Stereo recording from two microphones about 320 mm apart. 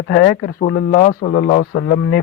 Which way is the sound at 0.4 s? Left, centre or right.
Left.